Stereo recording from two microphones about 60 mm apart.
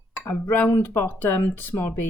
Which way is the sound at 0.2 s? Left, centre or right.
Left.